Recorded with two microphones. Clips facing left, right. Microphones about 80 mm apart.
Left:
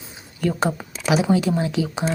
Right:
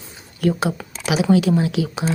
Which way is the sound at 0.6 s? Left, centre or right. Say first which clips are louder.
Left 1 dB; left.